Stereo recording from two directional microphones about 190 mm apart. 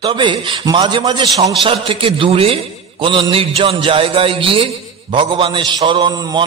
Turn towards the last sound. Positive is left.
turn(degrees=-20)  # may be behind; listen again after turning